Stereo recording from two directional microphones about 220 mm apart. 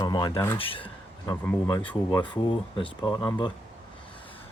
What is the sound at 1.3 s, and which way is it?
Speech, 10° left (ahead or behind).